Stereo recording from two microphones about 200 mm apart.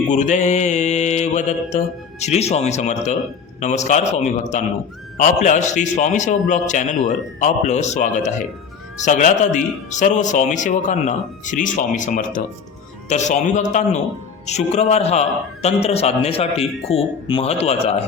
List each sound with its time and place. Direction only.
0.1 s speech: 35° left (ahead or behind)